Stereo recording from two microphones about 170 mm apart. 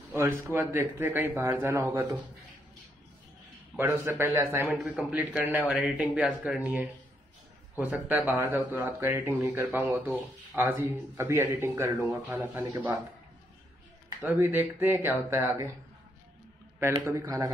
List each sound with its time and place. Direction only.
0.5 s speech: 15° right (ahead or behind)
3.7 s speech: 15° right (ahead or behind)
8.1 s speech: 10° right (ahead or behind)
14.2 s speech: 10° right (ahead or behind)
16.8 s speech: 15° right (ahead or behind)